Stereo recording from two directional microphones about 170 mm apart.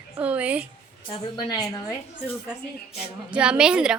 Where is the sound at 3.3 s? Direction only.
5° right (ahead or behind).